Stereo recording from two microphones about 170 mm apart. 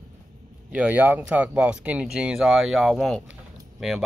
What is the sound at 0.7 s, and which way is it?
Speech, 10° right (ahead or behind).